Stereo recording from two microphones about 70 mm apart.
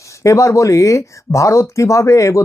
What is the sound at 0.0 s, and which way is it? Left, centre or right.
Speech, left.